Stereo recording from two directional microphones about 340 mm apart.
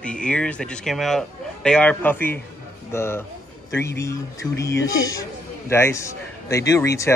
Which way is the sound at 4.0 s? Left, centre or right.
Centre.